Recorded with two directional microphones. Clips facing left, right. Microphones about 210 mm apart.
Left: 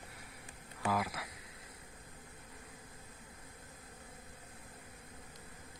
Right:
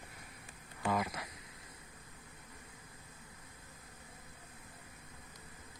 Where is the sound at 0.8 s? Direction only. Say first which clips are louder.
Even; 5° left (ahead or behind).